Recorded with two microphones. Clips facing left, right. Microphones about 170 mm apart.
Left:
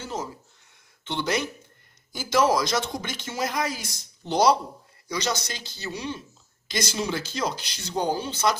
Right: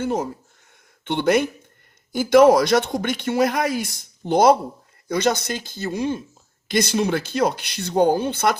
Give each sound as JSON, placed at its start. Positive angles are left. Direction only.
{"t": 0.0, "sound": "speech", "side_deg": -60}